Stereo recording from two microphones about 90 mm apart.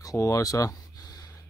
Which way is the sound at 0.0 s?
40° left (ahead or behind).